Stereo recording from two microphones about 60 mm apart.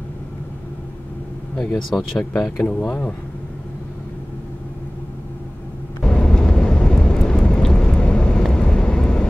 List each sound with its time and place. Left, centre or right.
1.9 s speech: centre
2.7 s speech: left
6.0 s vehicle: centre